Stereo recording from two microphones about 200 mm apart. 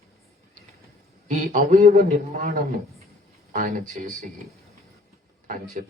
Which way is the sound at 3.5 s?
40° right (ahead or behind).